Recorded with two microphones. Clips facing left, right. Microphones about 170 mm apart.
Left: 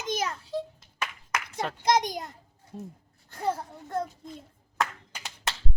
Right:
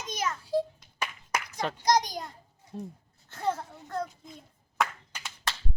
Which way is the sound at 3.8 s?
20° left (ahead or behind).